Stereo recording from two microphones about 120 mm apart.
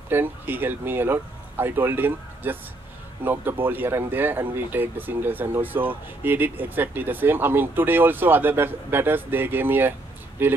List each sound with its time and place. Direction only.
0.1 s speech: 15° right (ahead or behind)